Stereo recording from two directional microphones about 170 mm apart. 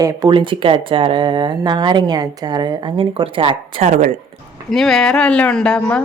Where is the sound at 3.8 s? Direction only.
45° right (ahead or behind).